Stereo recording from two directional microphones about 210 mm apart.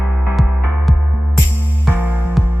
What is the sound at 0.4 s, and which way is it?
Music, centre (ahead or behind).